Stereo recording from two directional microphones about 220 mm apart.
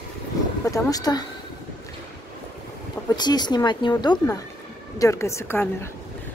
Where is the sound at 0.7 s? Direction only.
15° left (ahead or behind).